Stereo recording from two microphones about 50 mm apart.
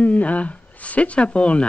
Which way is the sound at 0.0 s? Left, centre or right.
Left.